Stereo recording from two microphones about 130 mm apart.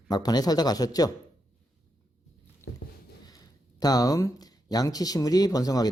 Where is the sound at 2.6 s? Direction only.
20° left (ahead or behind).